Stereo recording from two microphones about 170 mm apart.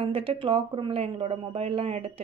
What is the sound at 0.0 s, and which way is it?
Speech, 30° right (ahead or behind).